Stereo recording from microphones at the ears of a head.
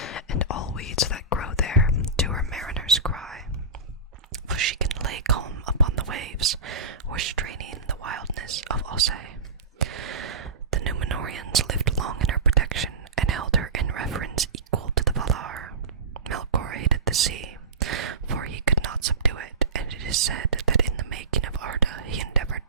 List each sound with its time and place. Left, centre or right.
0.0 s whispering: left
4.3 s whispering: right